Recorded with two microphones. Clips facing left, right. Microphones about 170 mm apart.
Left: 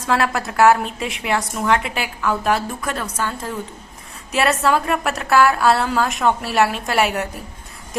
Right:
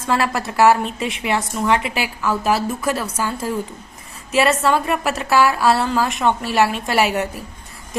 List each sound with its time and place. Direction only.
0.0 s a woman's voice: centre (ahead or behind)